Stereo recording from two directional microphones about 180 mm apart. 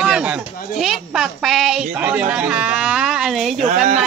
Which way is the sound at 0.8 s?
Centre (ahead or behind).